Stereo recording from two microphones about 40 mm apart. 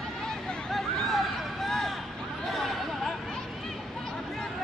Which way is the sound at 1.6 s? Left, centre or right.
Centre.